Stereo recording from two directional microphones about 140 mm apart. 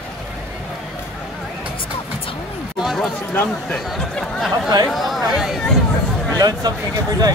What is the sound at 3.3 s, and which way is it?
Speech, 10° left (ahead or behind).